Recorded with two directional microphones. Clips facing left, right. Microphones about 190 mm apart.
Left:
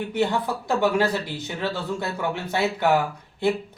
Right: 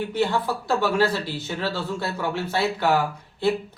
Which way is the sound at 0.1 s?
20° left (ahead or behind).